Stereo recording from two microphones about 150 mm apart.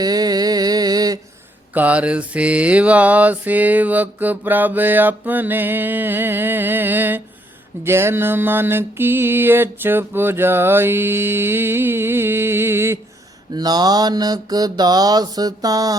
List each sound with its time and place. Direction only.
0.0 s a sound: 25° right (ahead or behind)
1.7 s mantra: 10° right (ahead or behind)
13.5 s mantra: 25° right (ahead or behind)